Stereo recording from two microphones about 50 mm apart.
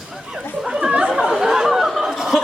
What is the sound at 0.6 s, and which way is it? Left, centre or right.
Chatter, centre.